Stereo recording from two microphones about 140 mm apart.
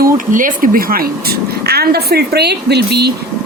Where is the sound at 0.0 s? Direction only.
80° right.